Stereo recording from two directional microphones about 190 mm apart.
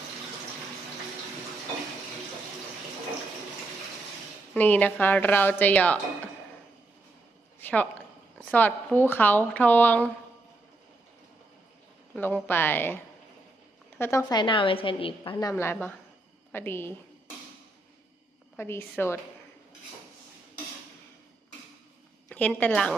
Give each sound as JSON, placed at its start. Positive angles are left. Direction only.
{"t": 4.5, "sound": "a woman's voice", "side_deg": 10}
{"t": 7.6, "sound": "a sound", "side_deg": 10}
{"t": 8.4, "sound": "a woman's voice", "side_deg": 5}
{"t": 12.1, "sound": "a woman's voice", "side_deg": 10}
{"t": 14.0, "sound": "a woman's voice", "side_deg": 15}
{"t": 18.5, "sound": "a woman's voice", "side_deg": 10}
{"t": 22.3, "sound": "speech", "side_deg": 10}